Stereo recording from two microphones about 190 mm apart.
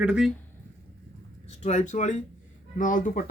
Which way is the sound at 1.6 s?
40° left (ahead or behind).